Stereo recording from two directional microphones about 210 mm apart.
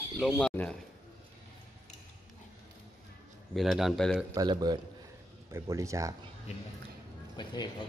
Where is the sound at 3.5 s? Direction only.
Centre (ahead or behind).